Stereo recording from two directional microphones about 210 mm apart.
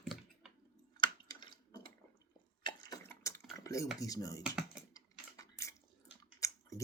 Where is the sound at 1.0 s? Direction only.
20° left (ahead or behind).